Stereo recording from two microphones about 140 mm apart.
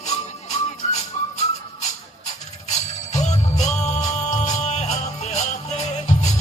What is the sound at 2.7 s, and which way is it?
Jingle bell, 55° left (ahead or behind).